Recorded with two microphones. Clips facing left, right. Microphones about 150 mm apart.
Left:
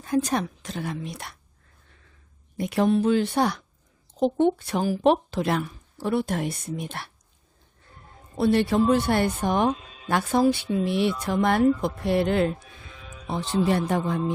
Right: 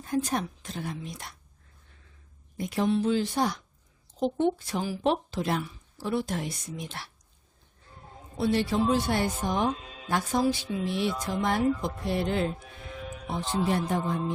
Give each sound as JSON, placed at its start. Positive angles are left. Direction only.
{"t": 0.0, "sound": "a woman's voice", "side_deg": 85}
{"t": 2.6, "sound": "a woman's voice", "side_deg": 65}
{"t": 8.4, "sound": "speech", "side_deg": 60}
{"t": 13.2, "sound": "a woman's voice", "side_deg": 85}